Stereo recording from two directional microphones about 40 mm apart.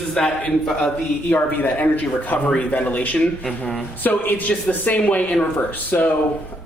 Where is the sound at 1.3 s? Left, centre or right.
Left.